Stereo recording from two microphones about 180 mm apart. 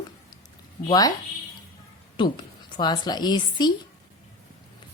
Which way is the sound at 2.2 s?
25° left (ahead or behind).